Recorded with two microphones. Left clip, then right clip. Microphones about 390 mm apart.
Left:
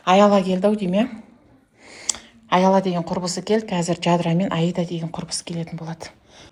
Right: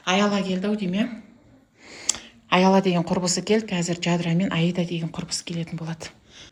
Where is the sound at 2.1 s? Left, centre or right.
Centre.